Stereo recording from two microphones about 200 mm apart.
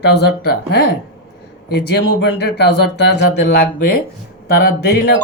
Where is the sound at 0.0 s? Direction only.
55° left (ahead or behind).